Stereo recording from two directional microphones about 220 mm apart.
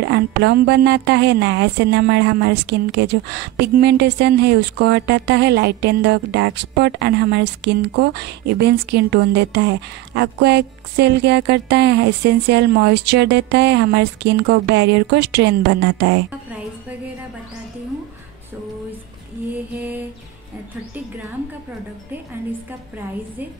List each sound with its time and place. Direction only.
0.0 s a woman's voice: 50° right (ahead or behind)